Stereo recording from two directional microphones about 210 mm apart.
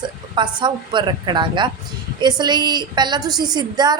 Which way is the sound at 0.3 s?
20° right (ahead or behind).